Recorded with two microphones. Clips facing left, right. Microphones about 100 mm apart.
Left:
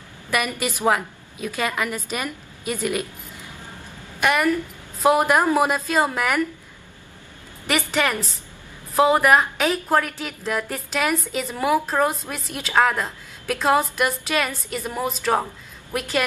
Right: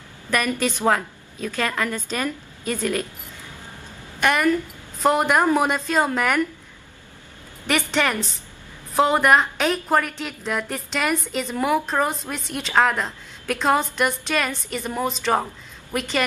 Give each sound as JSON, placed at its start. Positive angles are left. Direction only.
{"t": 0.3, "sound": "a woman's voice", "side_deg": 10}
{"t": 4.2, "sound": "a woman's voice", "side_deg": 5}
{"t": 7.6, "sound": "a woman's voice", "side_deg": 5}